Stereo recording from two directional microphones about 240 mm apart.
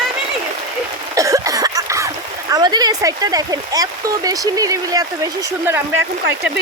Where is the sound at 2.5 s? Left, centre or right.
Centre.